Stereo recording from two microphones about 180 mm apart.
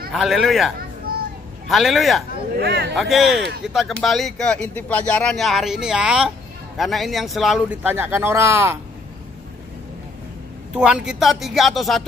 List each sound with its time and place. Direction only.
0.1 s a man's voice: centre (ahead or behind)
1.1 s vehicle: 55° right (ahead or behind)
1.7 s a man's voice: centre (ahead or behind)
2.6 s a man's voice: 65° right (ahead or behind)
3.0 s a man's voice: centre (ahead or behind)
7.9 s speech: 10° right (ahead or behind)
10.7 s a man's voice: 5° right (ahead or behind)